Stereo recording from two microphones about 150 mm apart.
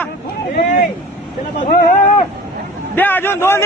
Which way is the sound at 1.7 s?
75° left (ahead or behind).